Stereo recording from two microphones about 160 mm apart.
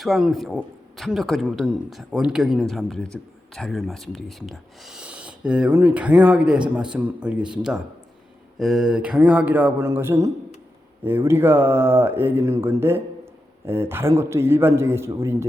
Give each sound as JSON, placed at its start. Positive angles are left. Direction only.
{"t": 0.0, "sound": "a man's voice", "side_deg": 0}